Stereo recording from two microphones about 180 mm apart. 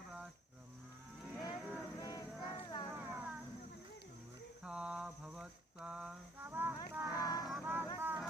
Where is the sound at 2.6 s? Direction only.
20° left (ahead or behind).